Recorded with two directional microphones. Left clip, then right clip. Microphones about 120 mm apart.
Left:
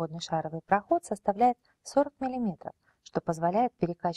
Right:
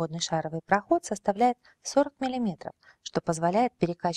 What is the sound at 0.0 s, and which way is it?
Speech, 20° right (ahead or behind).